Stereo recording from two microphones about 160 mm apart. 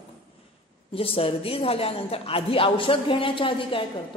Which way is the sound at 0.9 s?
35° left (ahead or behind).